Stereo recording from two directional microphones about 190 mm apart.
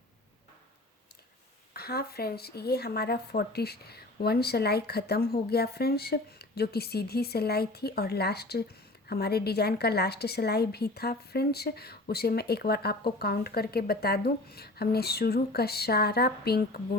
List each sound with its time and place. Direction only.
1.7 s speech: 55° left (ahead or behind)